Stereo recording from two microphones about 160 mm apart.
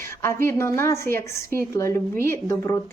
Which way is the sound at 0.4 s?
15° left (ahead or behind).